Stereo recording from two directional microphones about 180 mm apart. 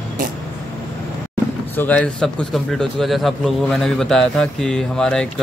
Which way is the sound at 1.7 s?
10° left (ahead or behind).